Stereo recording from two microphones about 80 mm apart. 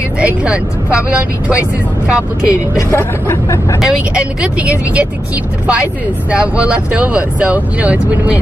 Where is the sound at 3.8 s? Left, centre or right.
Centre.